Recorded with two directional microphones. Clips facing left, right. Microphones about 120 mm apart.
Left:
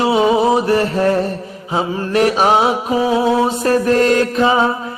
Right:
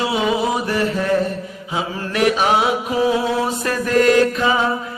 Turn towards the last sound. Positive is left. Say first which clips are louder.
# left 2 dB
turn(degrees=30)  # may be behind; listen again after turning